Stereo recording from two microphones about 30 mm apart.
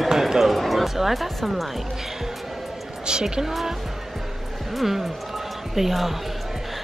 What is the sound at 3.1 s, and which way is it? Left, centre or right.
Speech, right.